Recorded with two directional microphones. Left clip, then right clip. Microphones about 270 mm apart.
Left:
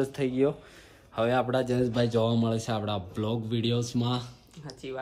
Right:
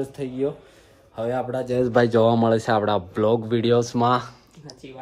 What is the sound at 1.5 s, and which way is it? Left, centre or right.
Speech, centre.